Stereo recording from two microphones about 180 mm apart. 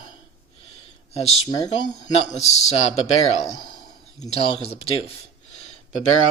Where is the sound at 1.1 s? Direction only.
35° left (ahead or behind).